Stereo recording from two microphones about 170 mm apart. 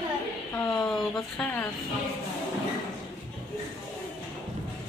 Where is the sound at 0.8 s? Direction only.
5° left (ahead or behind).